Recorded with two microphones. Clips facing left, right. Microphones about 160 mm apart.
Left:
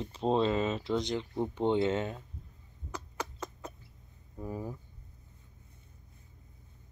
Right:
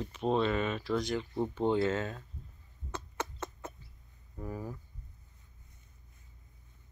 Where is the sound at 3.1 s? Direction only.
25° right (ahead or behind).